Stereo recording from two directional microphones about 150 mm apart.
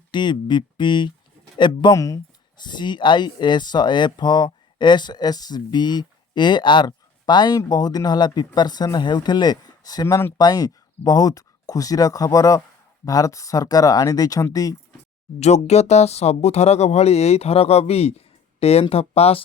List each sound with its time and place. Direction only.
0.1 s speech: 30° left (ahead or behind)
15.4 s speech: 50° left (ahead or behind)